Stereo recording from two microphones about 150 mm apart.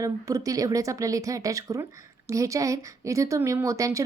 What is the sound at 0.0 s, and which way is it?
A woman's voice, 20° right (ahead or behind).